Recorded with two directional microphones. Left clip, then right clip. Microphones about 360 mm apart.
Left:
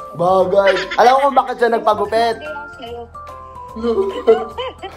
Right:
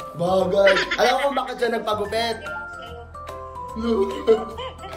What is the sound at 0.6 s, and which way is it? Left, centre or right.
Speech, centre.